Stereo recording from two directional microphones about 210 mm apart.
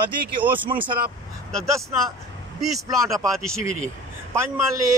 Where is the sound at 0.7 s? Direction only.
25° right (ahead or behind).